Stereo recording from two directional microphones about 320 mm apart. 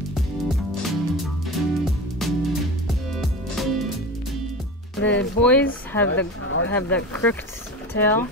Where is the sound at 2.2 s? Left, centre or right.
Centre.